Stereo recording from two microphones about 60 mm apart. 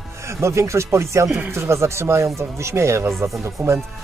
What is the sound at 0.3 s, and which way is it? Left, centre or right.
Speech, right.